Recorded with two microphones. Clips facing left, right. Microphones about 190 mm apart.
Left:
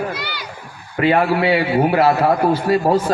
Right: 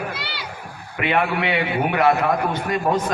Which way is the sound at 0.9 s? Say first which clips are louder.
Left 6 dB; 35° left (ahead or behind).